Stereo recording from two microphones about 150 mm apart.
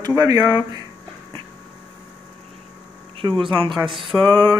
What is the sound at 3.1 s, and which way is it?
Speech, 35° right (ahead or behind).